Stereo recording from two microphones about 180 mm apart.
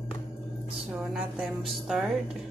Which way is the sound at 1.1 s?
Centre (ahead or behind).